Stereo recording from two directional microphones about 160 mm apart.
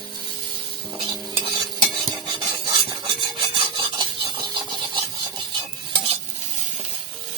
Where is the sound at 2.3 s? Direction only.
30° right (ahead or behind).